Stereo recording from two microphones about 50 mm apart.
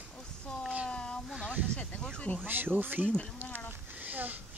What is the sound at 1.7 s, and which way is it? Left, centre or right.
Speech, centre.